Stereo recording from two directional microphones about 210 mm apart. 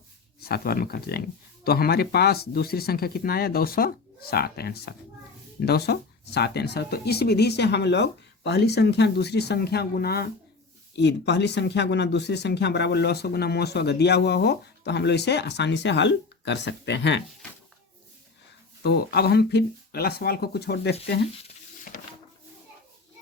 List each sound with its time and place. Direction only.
0.3 s speech: 50° left (ahead or behind)
18.8 s speech: 50° left (ahead or behind)
21.4 s stir: 40° left (ahead or behind)